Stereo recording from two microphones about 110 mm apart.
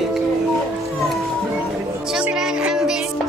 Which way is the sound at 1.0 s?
Centre (ahead or behind).